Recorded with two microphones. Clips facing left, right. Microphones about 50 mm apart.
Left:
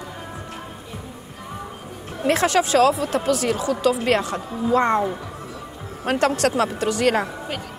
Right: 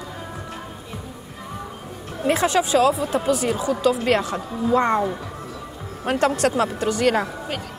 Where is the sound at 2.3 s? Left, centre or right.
Left.